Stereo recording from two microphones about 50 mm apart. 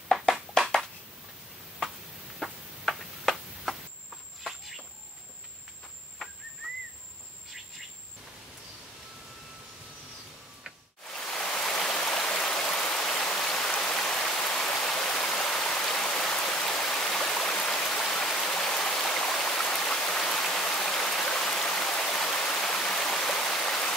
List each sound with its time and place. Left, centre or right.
0.1 s a sound: centre
2.4 s tick-tock: centre
4.4 s a sound: centre
11.1 s stream: centre
13.1 s rain: left
13.5 s stream: centre